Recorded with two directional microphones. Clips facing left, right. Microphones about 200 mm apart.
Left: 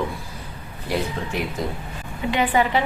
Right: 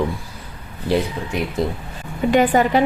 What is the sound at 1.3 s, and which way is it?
Speech, 20° right (ahead or behind).